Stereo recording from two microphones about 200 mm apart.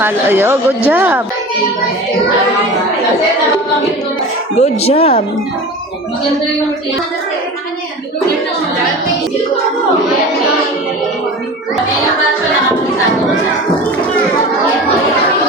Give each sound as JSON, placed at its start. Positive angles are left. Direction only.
{"t": 0.0, "sound": "speech", "side_deg": -10}
{"t": 4.6, "sound": "speech", "side_deg": 30}